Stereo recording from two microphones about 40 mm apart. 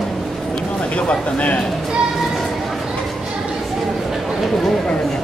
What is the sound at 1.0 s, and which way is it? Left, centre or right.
Speech, left.